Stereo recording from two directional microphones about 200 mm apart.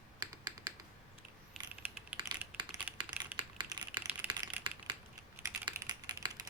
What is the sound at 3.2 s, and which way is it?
Typing, 20° right (ahead or behind).